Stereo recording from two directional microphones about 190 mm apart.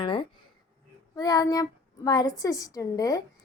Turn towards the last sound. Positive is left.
turn(degrees=20)  # may be behind; listen again after turning